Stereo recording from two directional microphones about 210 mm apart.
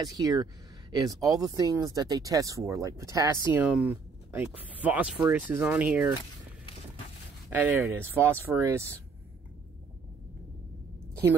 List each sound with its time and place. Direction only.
0.0 s speech: 15° right (ahead or behind)
7.4 s speech: 5° right (ahead or behind)